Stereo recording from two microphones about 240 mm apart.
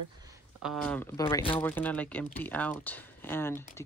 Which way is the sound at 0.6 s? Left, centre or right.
Centre.